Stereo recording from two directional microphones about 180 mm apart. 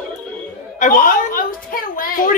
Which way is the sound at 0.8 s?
50° left (ahead or behind).